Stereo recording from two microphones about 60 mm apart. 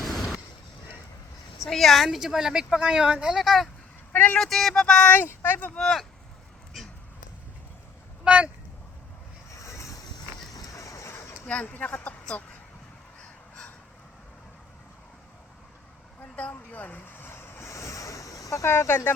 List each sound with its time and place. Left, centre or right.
0.0 s a sound: centre
1.5 s a woman's voice: centre
3.3 s speech: centre
4.1 s speech: left
4.4 s speech: centre
5.3 s speech: left
5.7 s speech: centre
6.8 s a sound: centre
8.2 s speech: right
9.6 s vehicle: left
10.5 s a sound: left
11.4 s speech: left
16.3 s vehicle: left
18.6 s speech: left